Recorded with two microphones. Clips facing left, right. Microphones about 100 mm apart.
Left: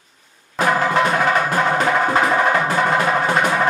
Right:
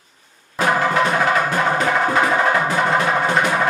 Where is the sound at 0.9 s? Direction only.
5° left (ahead or behind).